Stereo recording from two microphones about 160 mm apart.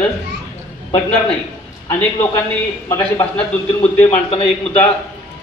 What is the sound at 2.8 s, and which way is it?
Speech, 15° left (ahead or behind).